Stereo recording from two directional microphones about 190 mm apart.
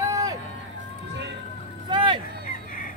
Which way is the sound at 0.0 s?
20° right (ahead or behind).